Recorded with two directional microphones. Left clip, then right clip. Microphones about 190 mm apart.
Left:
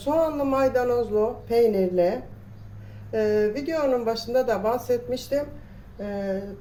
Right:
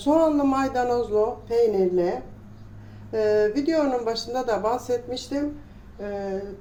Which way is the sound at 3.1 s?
25° right (ahead or behind).